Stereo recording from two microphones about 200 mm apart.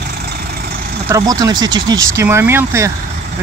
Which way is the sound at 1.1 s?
20° right (ahead or behind).